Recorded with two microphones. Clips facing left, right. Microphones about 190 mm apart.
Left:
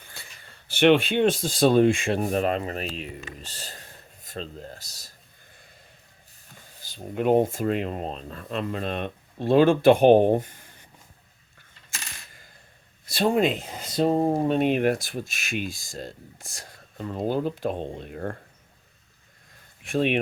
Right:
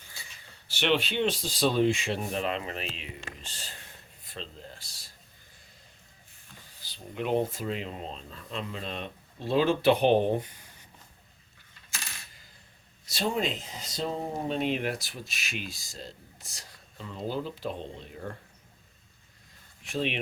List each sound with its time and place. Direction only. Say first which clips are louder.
0.0 s a sound: left 4 dB; 55° left (ahead or behind)
0.7 s speech: left 9 dB; 55° left (ahead or behind)
6.8 s speech: left 9 dB; 45° left (ahead or behind)
13.1 s speech: left 8 dB; 55° left (ahead or behind)
19.8 s speech: left 7 dB; 55° left (ahead or behind)